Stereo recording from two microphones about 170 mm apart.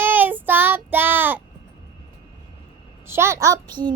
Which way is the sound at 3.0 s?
15° right (ahead or behind).